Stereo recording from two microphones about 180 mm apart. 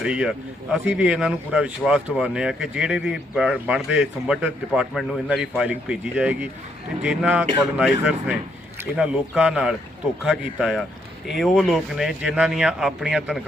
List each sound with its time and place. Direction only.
0.0 s speech: 5° right (ahead or behind)